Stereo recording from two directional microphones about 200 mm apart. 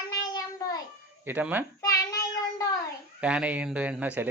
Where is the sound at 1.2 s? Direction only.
10° right (ahead or behind).